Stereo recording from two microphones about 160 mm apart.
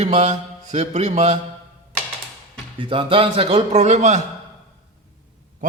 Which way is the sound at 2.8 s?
30° right (ahead or behind).